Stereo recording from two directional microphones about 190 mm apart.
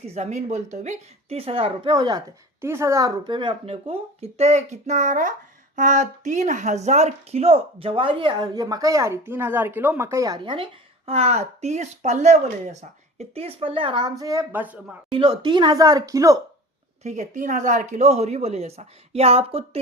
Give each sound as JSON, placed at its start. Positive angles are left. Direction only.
{"t": 0.1, "sound": "a woman's voice", "side_deg": -35}
{"t": 15.1, "sound": "speech", "side_deg": -25}
{"t": 17.0, "sound": "a woman's voice", "side_deg": -40}